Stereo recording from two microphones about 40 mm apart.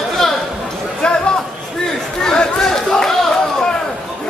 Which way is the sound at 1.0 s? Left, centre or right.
Left.